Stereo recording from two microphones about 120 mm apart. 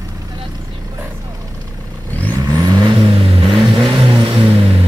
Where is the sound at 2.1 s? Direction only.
15° left (ahead or behind).